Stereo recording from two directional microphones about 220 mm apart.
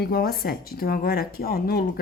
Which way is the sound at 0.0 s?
45° left (ahead or behind).